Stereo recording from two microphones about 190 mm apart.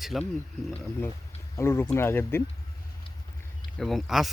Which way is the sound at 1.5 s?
15° left (ahead or behind).